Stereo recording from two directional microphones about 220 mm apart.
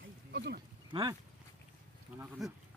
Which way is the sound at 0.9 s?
20° right (ahead or behind).